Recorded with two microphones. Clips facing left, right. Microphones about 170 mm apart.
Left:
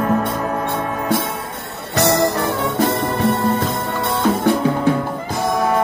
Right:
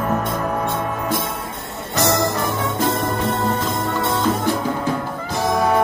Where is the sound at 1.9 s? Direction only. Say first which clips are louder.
Left 3 dB; 60° left (ahead or behind).